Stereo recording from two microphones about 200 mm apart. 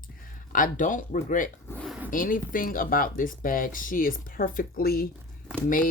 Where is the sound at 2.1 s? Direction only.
40° left (ahead or behind).